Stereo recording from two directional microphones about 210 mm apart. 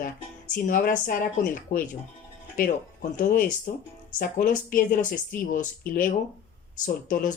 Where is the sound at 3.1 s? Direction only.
40° left (ahead or behind).